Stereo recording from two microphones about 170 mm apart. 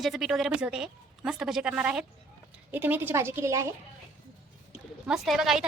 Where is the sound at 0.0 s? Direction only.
Centre (ahead or behind); by 3.7 s 15° right (ahead or behind).